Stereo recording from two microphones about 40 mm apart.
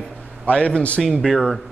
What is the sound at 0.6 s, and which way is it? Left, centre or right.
Speech, left.